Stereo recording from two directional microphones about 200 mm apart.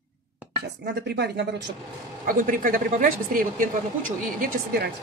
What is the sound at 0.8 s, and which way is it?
Speech, 55° right (ahead or behind).